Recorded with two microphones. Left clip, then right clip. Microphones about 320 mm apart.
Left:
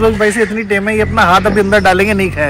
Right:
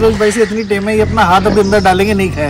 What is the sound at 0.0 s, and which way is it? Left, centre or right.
A man's voice, centre.